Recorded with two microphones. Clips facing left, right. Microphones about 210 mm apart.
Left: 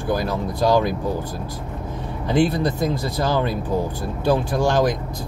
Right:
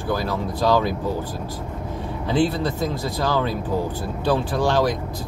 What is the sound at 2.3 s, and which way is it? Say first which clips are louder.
Speech: left 2 dB; 15° left (ahead or behind).